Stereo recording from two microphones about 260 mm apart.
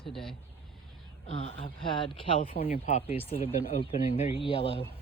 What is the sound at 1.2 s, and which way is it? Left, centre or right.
Speech, left.